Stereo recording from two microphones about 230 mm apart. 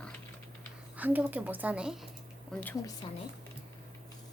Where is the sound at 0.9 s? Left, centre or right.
Centre.